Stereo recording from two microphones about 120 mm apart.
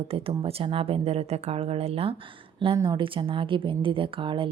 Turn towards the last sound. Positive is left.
turn(degrees=-45)  # may be behind; listen again after turning